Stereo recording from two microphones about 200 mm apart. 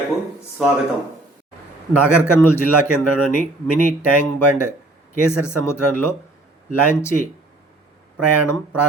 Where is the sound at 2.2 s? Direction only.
10° left (ahead or behind).